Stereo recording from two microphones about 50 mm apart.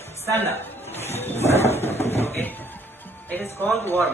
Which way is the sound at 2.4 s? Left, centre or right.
Left.